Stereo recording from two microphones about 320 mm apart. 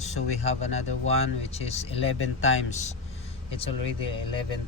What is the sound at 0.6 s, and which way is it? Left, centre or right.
Speech, centre.